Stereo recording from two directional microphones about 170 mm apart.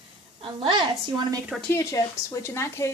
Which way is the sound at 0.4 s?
30° right (ahead or behind).